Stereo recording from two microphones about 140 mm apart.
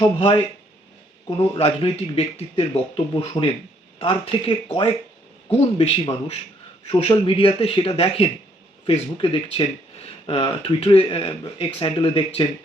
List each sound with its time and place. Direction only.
0.0 s speech: 35° left (ahead or behind)
1.5 s a man's voice: 45° left (ahead or behind)